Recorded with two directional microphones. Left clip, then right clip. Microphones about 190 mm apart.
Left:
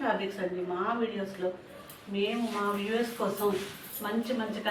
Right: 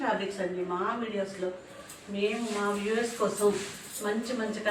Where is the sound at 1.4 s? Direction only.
10° left (ahead or behind).